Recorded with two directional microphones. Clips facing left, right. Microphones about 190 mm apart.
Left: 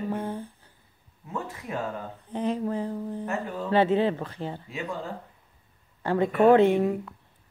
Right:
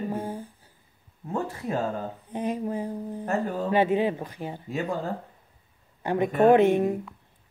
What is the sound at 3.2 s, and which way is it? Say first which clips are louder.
Speech: right 8 dB; 40° right (ahead or behind).